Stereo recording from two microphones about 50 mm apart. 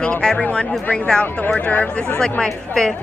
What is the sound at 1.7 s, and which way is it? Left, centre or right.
Speech, left.